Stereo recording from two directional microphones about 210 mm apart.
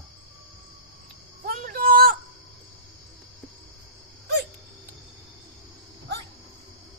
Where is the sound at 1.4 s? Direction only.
45° right (ahead or behind).